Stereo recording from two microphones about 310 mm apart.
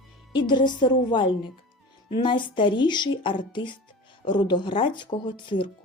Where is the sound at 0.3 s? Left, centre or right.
Centre.